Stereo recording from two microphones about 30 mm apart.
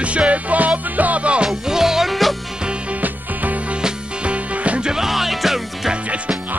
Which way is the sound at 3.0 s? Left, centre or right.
Right.